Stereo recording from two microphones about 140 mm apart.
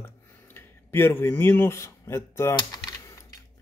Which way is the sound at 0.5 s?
15° left (ahead or behind).